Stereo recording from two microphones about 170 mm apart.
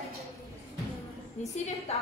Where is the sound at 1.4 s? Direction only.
45° left (ahead or behind).